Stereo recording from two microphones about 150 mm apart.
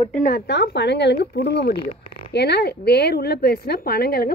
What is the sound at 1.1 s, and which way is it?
Speech, 90° left.